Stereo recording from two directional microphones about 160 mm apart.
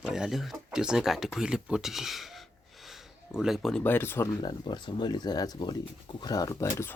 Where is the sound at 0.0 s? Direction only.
5° right (ahead or behind); by 4.3 s 15° left (ahead or behind).